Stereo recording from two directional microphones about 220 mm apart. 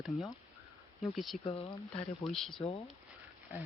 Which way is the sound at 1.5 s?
25° left (ahead or behind).